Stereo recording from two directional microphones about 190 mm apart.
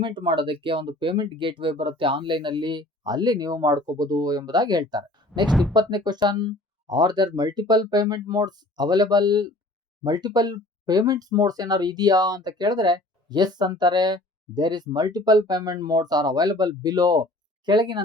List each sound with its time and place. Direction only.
0.0 s speech: 25° right (ahead or behind)
5.5 s speech: centre (ahead or behind)
5.7 s speech: 20° right (ahead or behind)